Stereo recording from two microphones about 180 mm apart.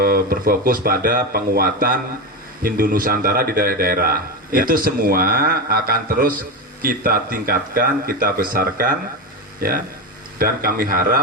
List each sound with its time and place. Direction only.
0.0 s speech: 55° right (ahead or behind)